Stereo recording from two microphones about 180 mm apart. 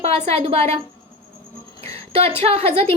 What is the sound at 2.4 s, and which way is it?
Speech, 35° right (ahead or behind).